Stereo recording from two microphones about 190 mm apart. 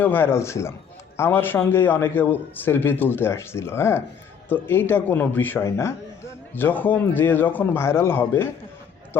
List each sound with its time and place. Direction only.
0.0 s a man's voice: 10° left (ahead or behind)